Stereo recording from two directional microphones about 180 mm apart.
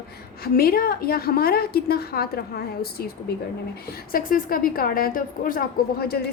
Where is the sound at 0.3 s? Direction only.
55° left (ahead or behind).